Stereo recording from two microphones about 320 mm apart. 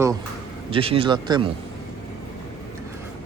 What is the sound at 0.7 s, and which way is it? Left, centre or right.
Speech, centre.